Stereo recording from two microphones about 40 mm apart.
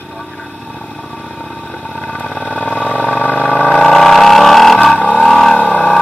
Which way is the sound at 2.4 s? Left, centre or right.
Left.